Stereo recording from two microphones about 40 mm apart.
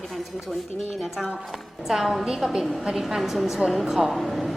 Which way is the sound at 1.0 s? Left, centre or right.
Centre.